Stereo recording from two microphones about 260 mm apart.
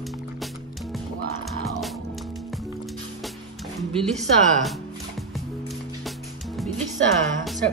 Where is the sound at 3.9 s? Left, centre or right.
Centre.